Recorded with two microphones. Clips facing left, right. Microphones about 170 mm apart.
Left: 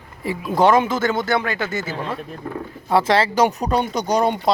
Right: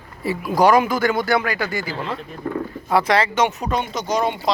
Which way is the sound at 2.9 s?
25° left (ahead or behind).